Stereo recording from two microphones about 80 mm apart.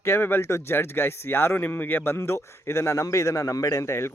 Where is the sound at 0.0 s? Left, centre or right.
Left.